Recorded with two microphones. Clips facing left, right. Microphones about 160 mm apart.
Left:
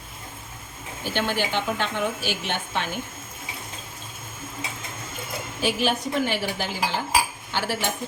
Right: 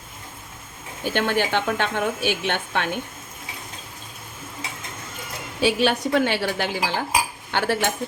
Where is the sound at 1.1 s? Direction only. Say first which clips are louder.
Right 3 dB; 60° right (ahead or behind).